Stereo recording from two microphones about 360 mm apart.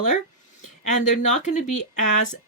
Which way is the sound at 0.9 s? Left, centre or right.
Centre.